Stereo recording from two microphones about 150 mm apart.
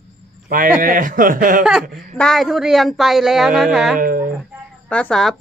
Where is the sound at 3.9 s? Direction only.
70° right (ahead or behind).